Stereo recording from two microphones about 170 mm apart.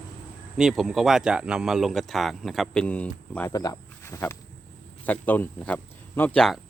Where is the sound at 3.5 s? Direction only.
20° left (ahead or behind); by 6.5 s 5° left (ahead or behind).